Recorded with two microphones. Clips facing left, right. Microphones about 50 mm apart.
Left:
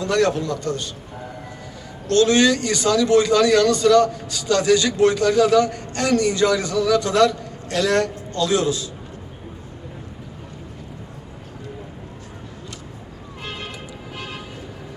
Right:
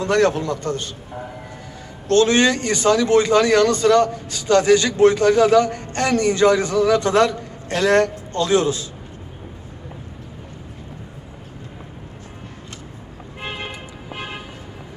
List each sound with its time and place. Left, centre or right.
0.0 s speech: right
2.0 s speech: right
13.4 s vehicle: right